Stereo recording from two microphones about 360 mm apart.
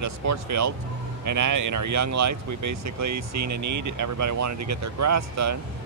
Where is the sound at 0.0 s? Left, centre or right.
Right.